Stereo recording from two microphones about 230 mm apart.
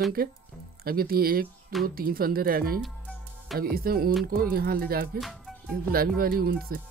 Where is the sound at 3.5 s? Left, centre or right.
Right.